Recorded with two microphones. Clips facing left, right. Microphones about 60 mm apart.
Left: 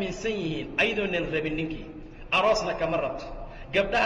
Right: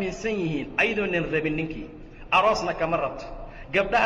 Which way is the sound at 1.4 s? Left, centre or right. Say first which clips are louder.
Right 2 dB; right.